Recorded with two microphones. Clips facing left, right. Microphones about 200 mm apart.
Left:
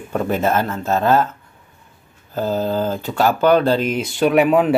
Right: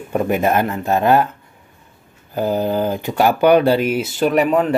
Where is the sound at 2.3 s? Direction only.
15° right (ahead or behind).